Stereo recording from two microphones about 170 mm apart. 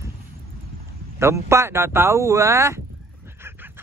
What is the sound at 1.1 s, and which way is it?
Speech, 15° right (ahead or behind).